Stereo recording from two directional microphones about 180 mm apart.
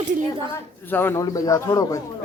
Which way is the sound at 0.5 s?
10° left (ahead or behind).